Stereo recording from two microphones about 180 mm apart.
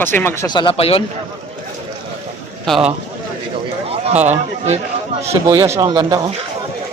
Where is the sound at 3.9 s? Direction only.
35° right (ahead or behind).